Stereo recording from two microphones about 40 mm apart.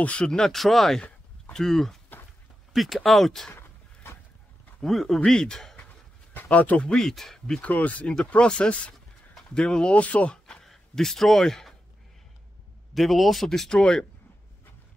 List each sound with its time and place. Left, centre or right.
0.0 s speech: left
0.5 s speech: centre
3.5 s a sound: left
4.8 s speech: centre
5.2 s speech: centre
6.3 s speech: left
7.0 s speech: centre
7.6 s speech: left
8.4 s speech: left
9.9 s speech: left
10.6 s a man's voice: centre
12.9 s speech: centre
13.5 s speech: centre